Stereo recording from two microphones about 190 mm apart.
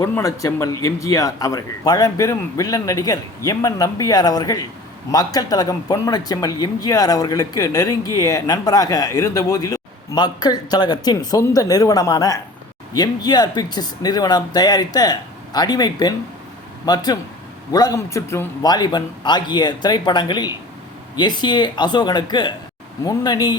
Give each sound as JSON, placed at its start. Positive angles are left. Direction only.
{"t": 0.0, "sound": "a man's voice", "side_deg": 15}